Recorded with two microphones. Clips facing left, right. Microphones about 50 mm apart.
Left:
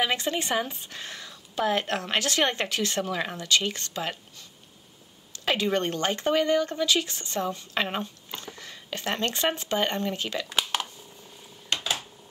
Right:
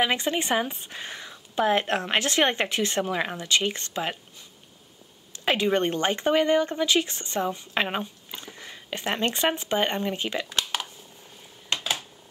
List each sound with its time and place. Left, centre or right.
0.0 s speech: right
5.3 s speech: right
10.4 s a sound: centre